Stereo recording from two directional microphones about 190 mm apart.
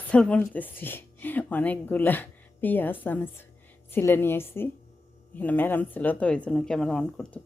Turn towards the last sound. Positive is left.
turn(degrees=5)  # may be behind; listen again after turning